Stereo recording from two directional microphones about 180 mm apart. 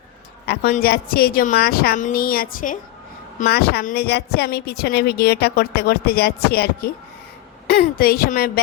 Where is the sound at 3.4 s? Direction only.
60° left (ahead or behind).